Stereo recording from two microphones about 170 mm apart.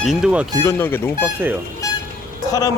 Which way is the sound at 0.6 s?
15° left (ahead or behind).